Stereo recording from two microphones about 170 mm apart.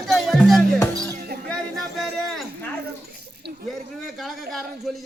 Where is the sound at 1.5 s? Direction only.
Centre (ahead or behind).